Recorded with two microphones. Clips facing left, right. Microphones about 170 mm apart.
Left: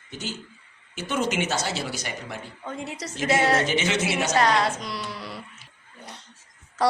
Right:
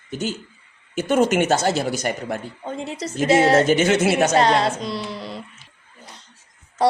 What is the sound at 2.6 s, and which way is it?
Speech, 25° right (ahead or behind).